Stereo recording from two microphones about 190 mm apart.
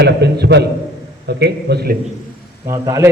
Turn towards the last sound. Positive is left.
turn(degrees=-15)  # may be behind; listen again after turning